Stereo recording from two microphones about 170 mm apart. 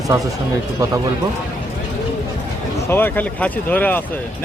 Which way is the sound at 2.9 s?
10° left (ahead or behind).